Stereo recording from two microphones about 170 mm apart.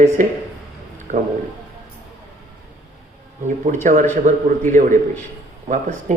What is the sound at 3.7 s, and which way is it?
Speech, 55° right (ahead or behind).